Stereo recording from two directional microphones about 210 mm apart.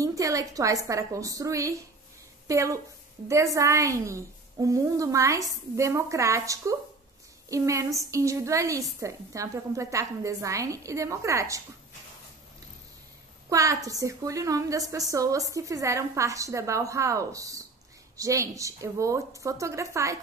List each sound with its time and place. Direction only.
0.0 s a woman's voice: 15° right (ahead or behind)
13.5 s a woman's voice: 15° right (ahead or behind)